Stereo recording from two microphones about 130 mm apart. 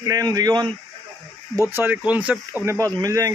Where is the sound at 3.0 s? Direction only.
25° right (ahead or behind).